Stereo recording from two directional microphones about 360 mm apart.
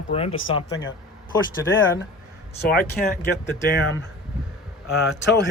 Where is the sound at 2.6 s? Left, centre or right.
Left.